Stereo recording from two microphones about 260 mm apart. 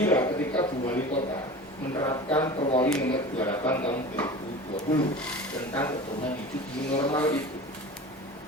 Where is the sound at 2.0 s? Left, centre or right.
Centre.